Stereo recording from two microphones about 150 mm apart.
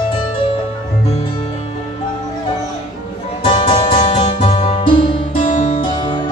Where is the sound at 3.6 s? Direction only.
35° left (ahead or behind).